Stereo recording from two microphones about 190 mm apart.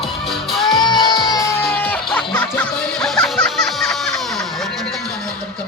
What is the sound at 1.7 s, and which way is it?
Music, 10° left (ahead or behind).